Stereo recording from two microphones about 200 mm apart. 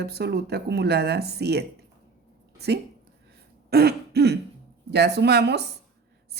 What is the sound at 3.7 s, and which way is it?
Throat clearing, 55° right (ahead or behind).